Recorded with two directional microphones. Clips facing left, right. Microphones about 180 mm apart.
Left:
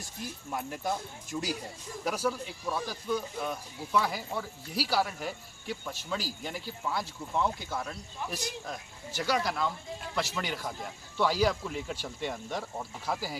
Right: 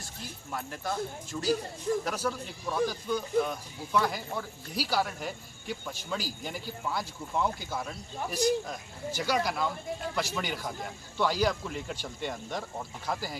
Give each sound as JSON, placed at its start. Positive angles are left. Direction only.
{"t": 0.5, "sound": "speech", "side_deg": 15}